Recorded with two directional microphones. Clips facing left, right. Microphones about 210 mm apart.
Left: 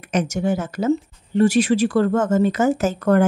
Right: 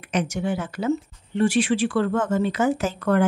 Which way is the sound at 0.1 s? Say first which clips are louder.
Left 4 dB; 45° left (ahead or behind).